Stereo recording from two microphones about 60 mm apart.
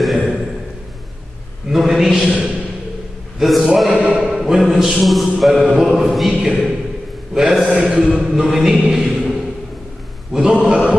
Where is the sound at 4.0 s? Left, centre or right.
Centre.